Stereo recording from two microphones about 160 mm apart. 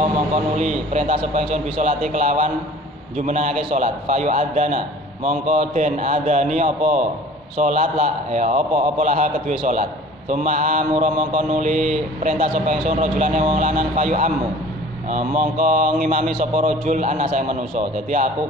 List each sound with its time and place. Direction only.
0.6 s a man's voice: 45° right (ahead or behind)
7.5 s a man's voice: 55° right (ahead or behind)
10.3 s a man's voice: 50° right (ahead or behind)
16.3 s a man's voice: 45° right (ahead or behind)